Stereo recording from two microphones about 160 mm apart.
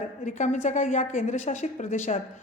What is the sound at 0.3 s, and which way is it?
A woman's voice, 50° left (ahead or behind).